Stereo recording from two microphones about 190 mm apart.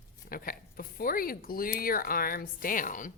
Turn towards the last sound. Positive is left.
turn(degrees=45)  # may be behind; listen again after turning